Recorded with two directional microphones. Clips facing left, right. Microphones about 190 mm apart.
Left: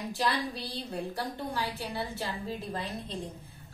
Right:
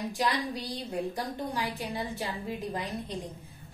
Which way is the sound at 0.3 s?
15° right (ahead or behind).